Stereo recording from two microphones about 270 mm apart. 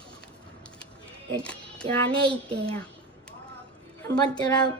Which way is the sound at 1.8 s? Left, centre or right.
Centre.